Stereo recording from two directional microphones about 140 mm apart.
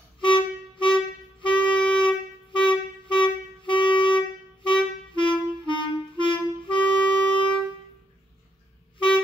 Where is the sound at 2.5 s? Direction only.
35° left (ahead or behind).